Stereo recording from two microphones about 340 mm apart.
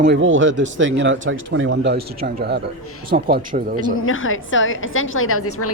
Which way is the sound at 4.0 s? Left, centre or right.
Left.